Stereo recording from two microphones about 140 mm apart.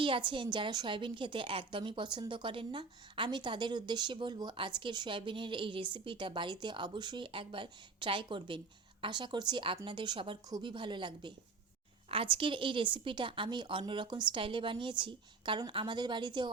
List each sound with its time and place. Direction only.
0.0 s a woman's voice: 35° right (ahead or behind)